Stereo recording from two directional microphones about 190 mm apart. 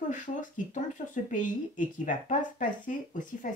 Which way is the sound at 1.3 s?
45° left (ahead or behind).